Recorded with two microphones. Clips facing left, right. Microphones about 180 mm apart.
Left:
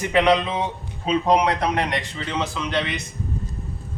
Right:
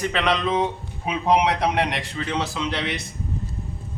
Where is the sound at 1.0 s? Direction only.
10° right (ahead or behind).